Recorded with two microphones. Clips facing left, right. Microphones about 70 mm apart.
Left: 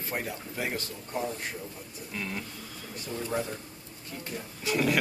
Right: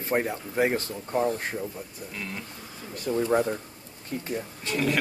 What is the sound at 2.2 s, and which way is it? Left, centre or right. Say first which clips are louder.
Speech: left 1 dB; centre.